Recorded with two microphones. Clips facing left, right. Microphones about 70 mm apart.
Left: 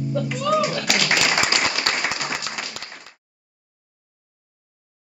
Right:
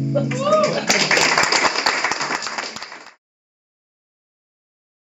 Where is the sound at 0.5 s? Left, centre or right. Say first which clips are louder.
Right 5 dB; centre.